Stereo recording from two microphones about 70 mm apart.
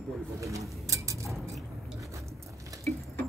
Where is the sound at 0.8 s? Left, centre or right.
Right.